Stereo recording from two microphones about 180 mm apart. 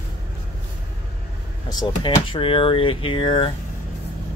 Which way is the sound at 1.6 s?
25° left (ahead or behind).